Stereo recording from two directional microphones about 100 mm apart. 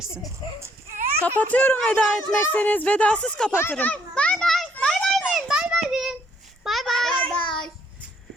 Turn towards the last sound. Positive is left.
turn(degrees=10)  # may be behind; listen again after turning